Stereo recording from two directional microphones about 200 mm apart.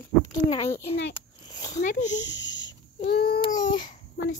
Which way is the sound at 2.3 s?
65° left (ahead or behind).